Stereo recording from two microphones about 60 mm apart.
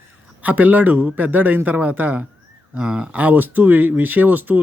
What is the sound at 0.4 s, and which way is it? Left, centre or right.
Speech, right.